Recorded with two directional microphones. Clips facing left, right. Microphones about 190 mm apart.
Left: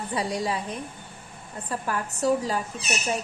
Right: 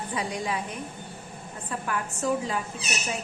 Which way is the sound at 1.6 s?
35° left (ahead or behind).